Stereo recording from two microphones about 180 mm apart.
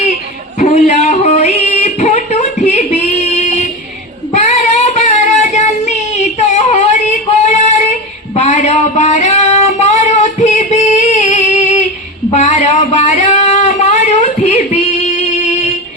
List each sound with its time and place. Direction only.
0.6 s music: 40° left (ahead or behind)
4.3 s child singing: 40° left (ahead or behind)
7.4 s female singing: 40° left (ahead or behind)
8.4 s a sound: 40° left (ahead or behind)